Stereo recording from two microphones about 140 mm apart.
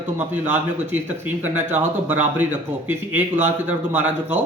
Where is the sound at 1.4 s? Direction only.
15° right (ahead or behind).